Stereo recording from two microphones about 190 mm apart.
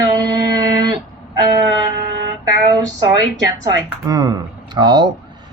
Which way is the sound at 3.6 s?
20° right (ahead or behind).